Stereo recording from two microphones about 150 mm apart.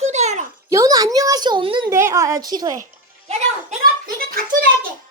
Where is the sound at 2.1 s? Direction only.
20° right (ahead or behind).